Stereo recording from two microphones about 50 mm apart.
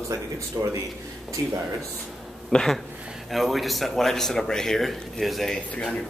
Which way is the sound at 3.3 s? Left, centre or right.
Centre.